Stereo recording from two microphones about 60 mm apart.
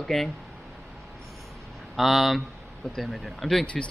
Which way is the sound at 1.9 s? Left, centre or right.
Centre.